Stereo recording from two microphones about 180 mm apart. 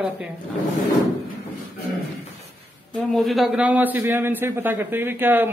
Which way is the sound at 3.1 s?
Centre (ahead or behind).